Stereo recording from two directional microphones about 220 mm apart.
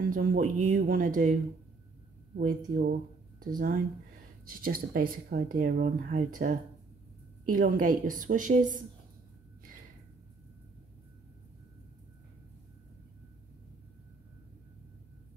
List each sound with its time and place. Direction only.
0.0 s speech: 40° right (ahead or behind)